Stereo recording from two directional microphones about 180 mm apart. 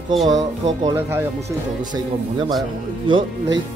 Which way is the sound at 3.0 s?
25° right (ahead or behind).